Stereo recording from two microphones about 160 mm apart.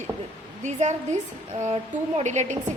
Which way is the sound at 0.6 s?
50° right (ahead or behind).